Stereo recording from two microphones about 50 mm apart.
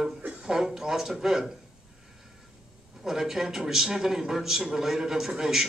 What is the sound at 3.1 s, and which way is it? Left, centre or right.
A man's voice, centre.